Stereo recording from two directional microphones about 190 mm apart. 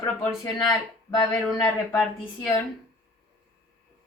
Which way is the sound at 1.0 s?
15° left (ahead or behind).